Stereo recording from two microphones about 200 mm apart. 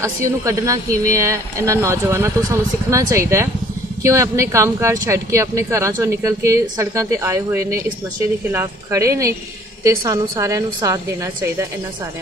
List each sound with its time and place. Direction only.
0.2 s speech: 15° right (ahead or behind)